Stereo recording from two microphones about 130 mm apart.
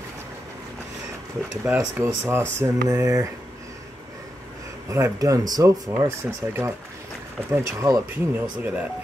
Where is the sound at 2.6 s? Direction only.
25° right (ahead or behind).